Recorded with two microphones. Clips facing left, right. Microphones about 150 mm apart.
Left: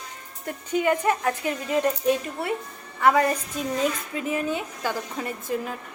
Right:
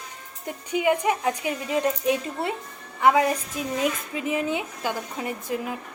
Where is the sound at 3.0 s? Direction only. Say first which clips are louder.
Even; 10° right (ahead or behind).